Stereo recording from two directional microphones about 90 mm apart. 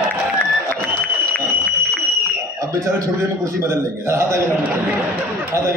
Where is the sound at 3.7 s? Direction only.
35° right (ahead or behind).